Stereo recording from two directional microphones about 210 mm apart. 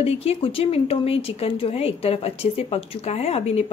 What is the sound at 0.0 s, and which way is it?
A woman's voice, 30° left (ahead or behind).